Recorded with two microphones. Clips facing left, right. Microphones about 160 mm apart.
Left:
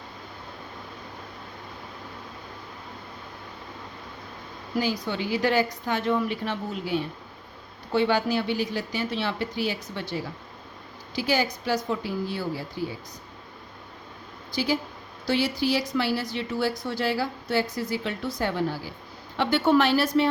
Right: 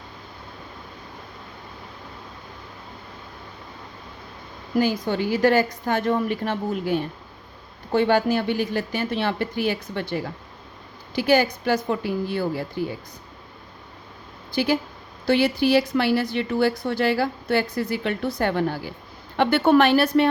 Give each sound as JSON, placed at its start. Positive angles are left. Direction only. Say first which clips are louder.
{"t": 4.8, "sound": "a woman's voice", "louder": "right 5 dB", "side_deg": -50}
{"t": 14.5, "sound": "a woman's voice", "louder": "right 4 dB", "side_deg": -60}